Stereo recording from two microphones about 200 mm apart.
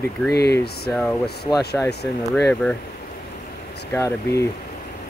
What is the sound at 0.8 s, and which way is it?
Speech, 5° left (ahead or behind).